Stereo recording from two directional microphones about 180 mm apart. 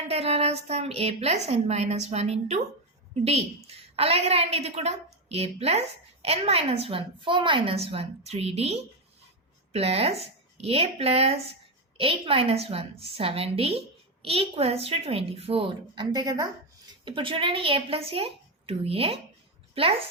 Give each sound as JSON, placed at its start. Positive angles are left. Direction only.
{"t": 0.1, "sound": "a woman's voice", "side_deg": -35}